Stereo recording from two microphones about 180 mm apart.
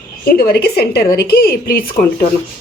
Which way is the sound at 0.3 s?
60° left (ahead or behind).